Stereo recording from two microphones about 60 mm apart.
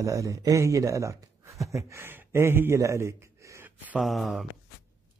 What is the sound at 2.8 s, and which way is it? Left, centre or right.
Gasp, right.